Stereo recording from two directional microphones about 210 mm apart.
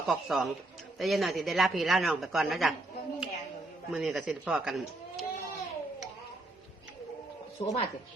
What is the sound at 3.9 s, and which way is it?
A woman's voice, centre (ahead or behind).